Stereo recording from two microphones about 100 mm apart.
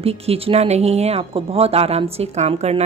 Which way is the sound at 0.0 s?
85° right.